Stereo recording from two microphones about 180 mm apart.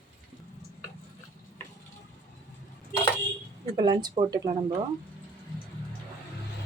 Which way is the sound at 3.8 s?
25° right (ahead or behind).